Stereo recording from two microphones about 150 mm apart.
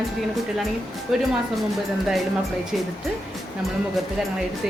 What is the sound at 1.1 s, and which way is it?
Speech, 5° right (ahead or behind).